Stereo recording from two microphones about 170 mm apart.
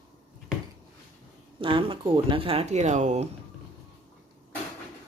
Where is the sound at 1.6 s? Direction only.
30° right (ahead or behind).